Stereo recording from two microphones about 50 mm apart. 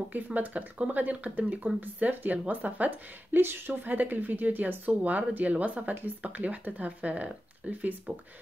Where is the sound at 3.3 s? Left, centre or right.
Right.